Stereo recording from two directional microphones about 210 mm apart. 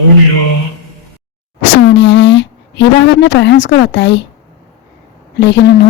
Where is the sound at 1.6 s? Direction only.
60° left (ahead or behind).